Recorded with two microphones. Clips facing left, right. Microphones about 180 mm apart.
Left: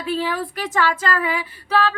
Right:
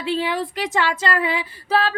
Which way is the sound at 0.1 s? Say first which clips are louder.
Right 1 dB; 20° right (ahead or behind).